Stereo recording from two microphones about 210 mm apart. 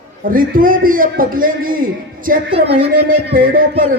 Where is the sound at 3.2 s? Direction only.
45° right (ahead or behind).